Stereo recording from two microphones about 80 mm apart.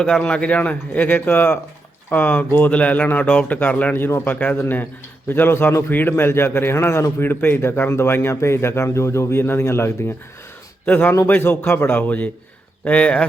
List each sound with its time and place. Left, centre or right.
0.0 s a man's voice: centre; by 9.9 s left
10.8 s a man's voice: centre